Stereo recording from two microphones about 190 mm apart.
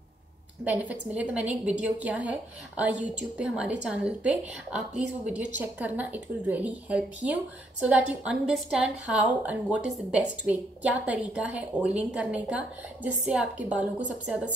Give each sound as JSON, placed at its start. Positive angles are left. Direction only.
{"t": 0.7, "sound": "a woman's voice", "side_deg": -10}